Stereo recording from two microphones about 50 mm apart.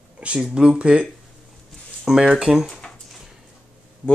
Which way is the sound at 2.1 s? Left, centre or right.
Centre.